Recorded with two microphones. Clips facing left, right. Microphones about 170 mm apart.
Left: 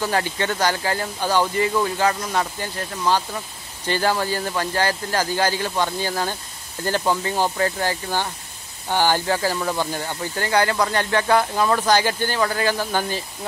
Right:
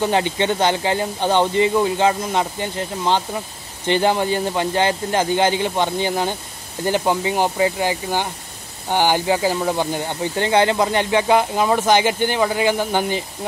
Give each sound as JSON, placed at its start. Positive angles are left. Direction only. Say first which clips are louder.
{"t": 0.0, "sound": "speech", "louder": "right 4 dB", "side_deg": -20}